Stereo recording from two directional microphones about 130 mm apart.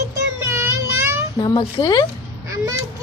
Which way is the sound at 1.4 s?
30° left (ahead or behind).